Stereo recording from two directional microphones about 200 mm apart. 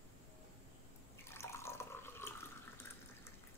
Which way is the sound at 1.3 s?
15° left (ahead or behind).